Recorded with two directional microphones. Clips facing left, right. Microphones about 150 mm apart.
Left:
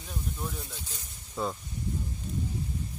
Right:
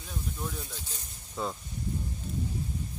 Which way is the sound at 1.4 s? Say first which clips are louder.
Left 2 dB; centre (ahead or behind).